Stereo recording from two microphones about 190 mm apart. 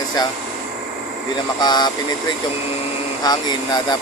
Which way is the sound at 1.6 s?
20° left (ahead or behind).